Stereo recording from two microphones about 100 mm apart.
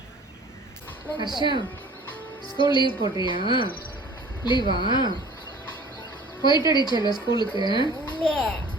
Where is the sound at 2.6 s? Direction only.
55° left (ahead or behind).